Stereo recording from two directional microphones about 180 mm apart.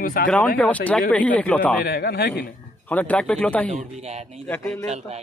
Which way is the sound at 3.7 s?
40° right (ahead or behind).